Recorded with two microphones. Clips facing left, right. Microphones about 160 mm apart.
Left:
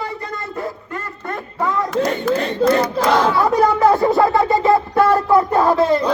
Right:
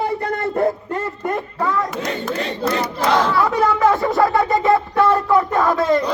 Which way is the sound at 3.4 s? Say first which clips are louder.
Left 2 dB; 35° left (ahead or behind).